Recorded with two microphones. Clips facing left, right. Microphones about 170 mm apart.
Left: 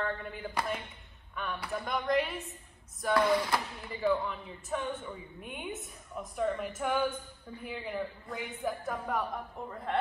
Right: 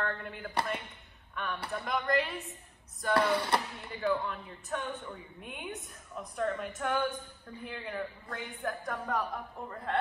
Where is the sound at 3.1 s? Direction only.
30° right (ahead or behind).